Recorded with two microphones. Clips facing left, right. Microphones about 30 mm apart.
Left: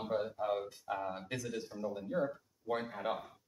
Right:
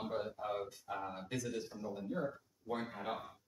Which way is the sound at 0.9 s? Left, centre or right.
Left.